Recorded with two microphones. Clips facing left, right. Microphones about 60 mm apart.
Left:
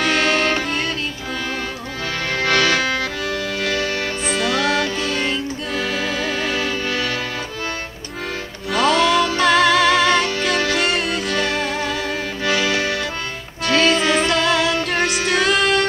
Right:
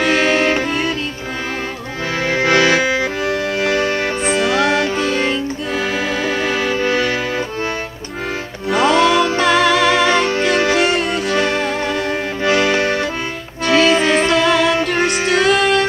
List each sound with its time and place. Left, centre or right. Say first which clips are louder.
0.0 s music: right 3 dB; centre
2.2 s accordion: right 4 dB; centre
4.3 s music: right 4 dB; centre
6.7 s music: right 6 dB; right
8.7 s music: right 3 dB; centre
10.5 s music: right 4 dB; right
10.8 s music: right 4 dB; centre
12.4 s accordion: right 5 dB; right
13.7 s music: right 3 dB; centre